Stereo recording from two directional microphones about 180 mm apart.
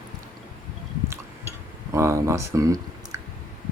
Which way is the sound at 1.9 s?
15° right (ahead or behind).